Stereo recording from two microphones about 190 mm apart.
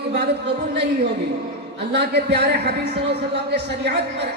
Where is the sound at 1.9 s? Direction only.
60° right (ahead or behind).